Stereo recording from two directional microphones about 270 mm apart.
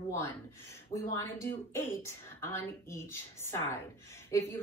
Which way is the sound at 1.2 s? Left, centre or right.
Centre.